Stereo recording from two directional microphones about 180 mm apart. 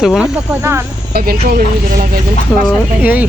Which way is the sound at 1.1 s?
55° right (ahead or behind).